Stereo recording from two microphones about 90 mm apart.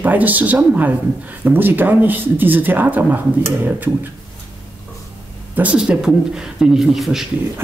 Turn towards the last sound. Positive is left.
turn(degrees=-5)  # may be behind; listen again after turning